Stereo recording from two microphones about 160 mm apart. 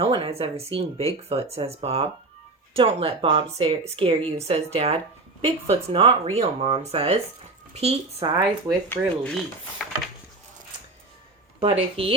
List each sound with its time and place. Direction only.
0.0 s speech: 35° right (ahead or behind)
8.9 s speech: 5° left (ahead or behind)
11.6 s speech: 35° right (ahead or behind)